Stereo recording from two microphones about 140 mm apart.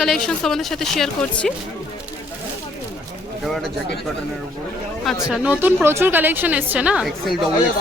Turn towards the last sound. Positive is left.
turn(degrees=0)  # may be behind; listen again after turning